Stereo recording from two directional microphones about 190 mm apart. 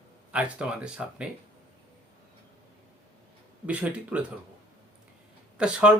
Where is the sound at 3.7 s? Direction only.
5° right (ahead or behind).